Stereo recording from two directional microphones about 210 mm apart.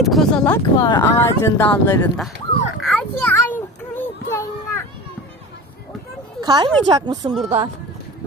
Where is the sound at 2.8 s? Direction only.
5° left (ahead or behind).